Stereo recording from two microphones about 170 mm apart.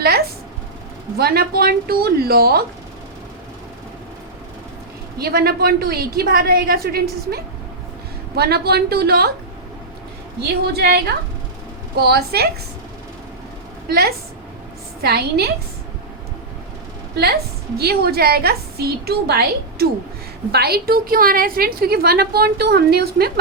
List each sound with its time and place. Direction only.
1.1 s a woman's voice: 65° right (ahead or behind)
5.2 s a woman's voice: 65° right (ahead or behind)
10.8 s a woman's voice: 65° right (ahead or behind)
13.8 s a woman's voice: 65° right (ahead or behind)
17.7 s a woman's voice: 65° right (ahead or behind)